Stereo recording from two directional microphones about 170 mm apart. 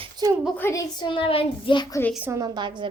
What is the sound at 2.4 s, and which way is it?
Speech, 25° right (ahead or behind).